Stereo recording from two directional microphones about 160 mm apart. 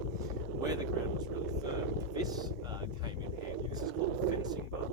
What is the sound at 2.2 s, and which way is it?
Speech, 25° right (ahead or behind).